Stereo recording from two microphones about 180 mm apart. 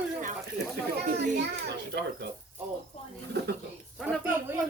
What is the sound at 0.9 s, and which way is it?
Children playing, 65° right (ahead or behind).